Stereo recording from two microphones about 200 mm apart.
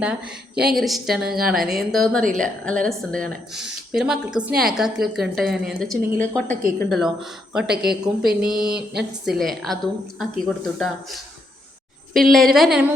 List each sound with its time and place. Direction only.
0.7 s speech: centre (ahead or behind)
8.5 s a sound: 50° right (ahead or behind)
9.2 s speech: centre (ahead or behind)